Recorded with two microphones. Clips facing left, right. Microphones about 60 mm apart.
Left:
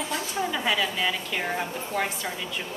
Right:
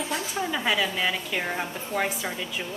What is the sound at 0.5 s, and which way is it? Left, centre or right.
A woman's voice, centre.